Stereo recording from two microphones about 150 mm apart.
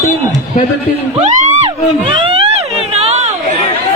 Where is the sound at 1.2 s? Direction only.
55° right (ahead or behind).